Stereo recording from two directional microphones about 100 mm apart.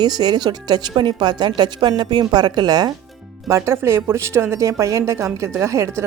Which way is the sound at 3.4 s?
30° right (ahead or behind).